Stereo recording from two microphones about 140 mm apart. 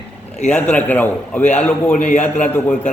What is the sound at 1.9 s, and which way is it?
Speech, 60° left (ahead or behind).